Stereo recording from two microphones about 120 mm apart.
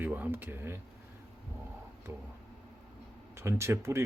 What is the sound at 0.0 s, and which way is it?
Speech, 15° right (ahead or behind).